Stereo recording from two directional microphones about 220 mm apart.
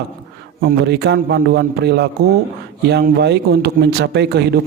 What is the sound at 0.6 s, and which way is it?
Speech, 50° right (ahead or behind).